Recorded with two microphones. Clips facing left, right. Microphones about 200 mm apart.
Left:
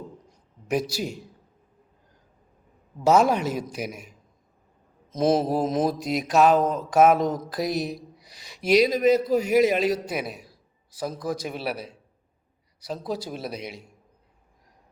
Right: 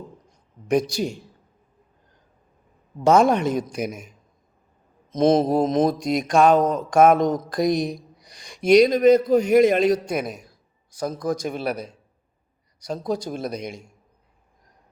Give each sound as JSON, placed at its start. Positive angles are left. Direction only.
{"t": 0.3, "sound": "a sound", "side_deg": 5}
{"t": 3.0, "sound": "speech", "side_deg": 5}
{"t": 5.1, "sound": "a man's voice", "side_deg": 5}